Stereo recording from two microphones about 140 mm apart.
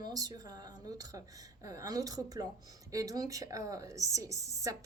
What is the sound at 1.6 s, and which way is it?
Speech, 25° right (ahead or behind).